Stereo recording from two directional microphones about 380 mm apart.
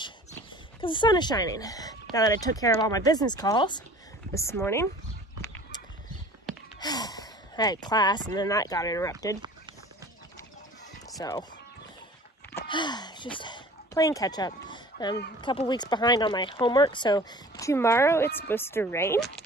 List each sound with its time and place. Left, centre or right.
0.7 s speech: centre
5.4 s horse: centre
6.4 s speech: centre
11.1 s speech: centre
12.5 s a sound: centre
15.4 s speech: centre